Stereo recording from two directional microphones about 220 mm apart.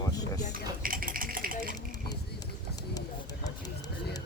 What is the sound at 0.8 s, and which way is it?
Sewing machine, 40° right (ahead or behind).